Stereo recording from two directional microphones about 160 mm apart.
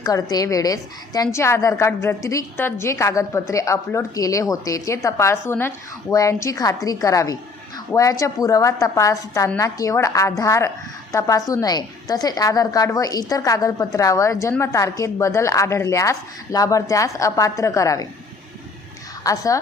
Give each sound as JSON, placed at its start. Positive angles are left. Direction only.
{"t": 0.0, "sound": "a woman's voice", "side_deg": 25}
{"t": 19.2, "sound": "a woman's voice", "side_deg": 20}